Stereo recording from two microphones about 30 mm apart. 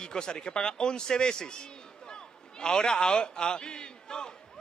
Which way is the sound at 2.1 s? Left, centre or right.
Left.